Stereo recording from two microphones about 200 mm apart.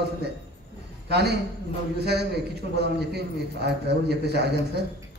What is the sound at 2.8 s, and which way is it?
A man's voice, 55° right (ahead or behind).